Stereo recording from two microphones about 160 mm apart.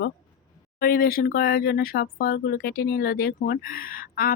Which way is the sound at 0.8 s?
65° left (ahead or behind).